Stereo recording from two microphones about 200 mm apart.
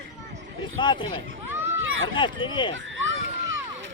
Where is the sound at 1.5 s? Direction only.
10° right (ahead or behind).